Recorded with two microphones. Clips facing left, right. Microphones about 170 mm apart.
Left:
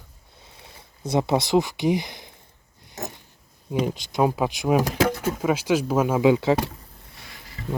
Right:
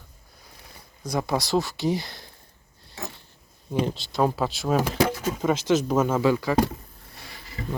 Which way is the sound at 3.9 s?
10° left (ahead or behind).